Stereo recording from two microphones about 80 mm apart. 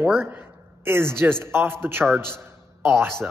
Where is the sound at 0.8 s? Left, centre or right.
Right.